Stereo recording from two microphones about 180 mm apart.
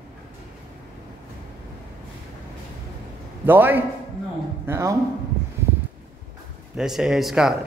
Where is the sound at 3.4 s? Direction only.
10° right (ahead or behind).